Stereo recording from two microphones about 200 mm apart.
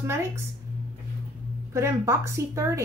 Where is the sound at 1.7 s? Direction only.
15° right (ahead or behind).